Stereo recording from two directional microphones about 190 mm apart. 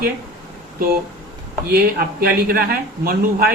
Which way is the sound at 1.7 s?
55° right (ahead or behind).